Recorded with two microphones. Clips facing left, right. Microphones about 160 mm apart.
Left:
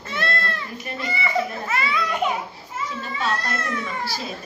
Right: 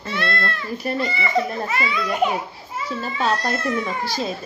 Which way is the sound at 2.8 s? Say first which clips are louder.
Right 4 dB; 35° right (ahead or behind).